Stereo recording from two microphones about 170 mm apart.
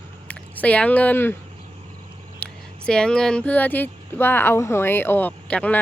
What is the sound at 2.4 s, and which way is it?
Speech, 5° left (ahead or behind).